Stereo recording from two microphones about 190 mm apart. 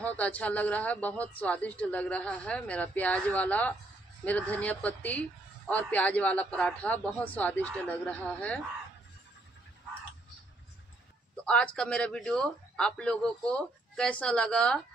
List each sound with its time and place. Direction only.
0.2 s a man's voice: 5° left (ahead or behind)
11.4 s a man's voice: 5° left (ahead or behind)